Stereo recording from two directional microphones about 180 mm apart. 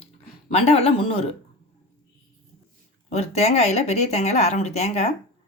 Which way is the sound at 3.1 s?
35° left (ahead or behind).